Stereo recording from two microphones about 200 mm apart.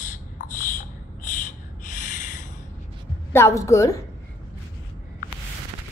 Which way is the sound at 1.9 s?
40° left (ahead or behind).